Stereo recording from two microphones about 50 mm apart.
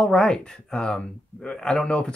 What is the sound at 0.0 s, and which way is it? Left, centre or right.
Speech, centre.